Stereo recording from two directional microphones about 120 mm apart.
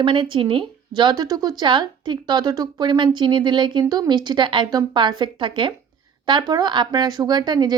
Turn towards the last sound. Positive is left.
turn(degrees=-35)  # may be behind; listen again after turning